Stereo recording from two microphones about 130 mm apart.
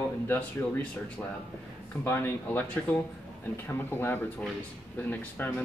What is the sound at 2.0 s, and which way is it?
Speech, 20° left (ahead or behind).